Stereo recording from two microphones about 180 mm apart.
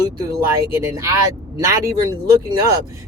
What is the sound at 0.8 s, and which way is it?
Speech, 15° right (ahead or behind).